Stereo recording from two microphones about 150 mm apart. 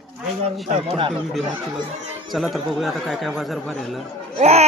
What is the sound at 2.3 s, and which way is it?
Speech, centre (ahead or behind).